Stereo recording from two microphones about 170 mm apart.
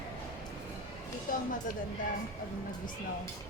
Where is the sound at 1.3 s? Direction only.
55° left (ahead or behind).